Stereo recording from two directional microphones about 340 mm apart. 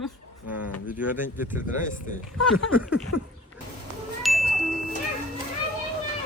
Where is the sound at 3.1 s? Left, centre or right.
Left.